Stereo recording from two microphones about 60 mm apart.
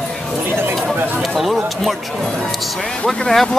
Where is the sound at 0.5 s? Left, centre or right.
Right.